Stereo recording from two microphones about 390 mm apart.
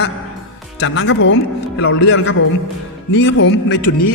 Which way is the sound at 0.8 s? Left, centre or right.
Left.